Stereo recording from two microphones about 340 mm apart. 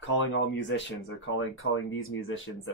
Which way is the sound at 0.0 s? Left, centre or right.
Left.